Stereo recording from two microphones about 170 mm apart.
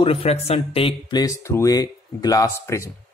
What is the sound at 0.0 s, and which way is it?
Speech, 35° left (ahead or behind).